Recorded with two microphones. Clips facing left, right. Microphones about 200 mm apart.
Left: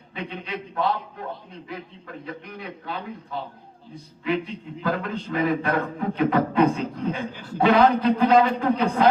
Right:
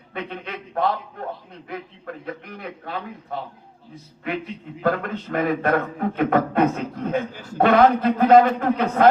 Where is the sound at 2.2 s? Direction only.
55° right (ahead or behind).